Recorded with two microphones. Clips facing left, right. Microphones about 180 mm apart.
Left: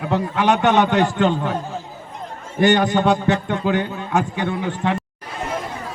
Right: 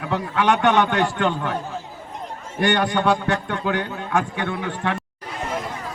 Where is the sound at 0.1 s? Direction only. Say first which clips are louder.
Left 2 dB; 20° left (ahead or behind).